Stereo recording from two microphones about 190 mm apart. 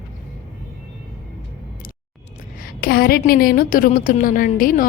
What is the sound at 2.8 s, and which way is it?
A woman's voice, 50° left (ahead or behind).